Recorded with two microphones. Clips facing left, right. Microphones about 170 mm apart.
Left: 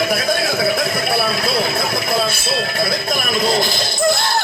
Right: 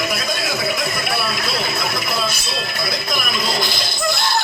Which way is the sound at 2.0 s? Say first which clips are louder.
Left 5 dB; 55° left (ahead or behind).